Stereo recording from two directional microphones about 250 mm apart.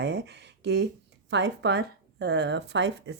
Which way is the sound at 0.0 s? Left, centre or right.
Right.